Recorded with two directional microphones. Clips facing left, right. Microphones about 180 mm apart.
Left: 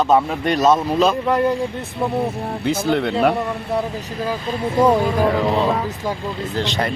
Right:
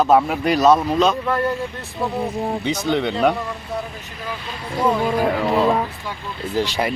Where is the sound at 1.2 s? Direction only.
15° left (ahead or behind).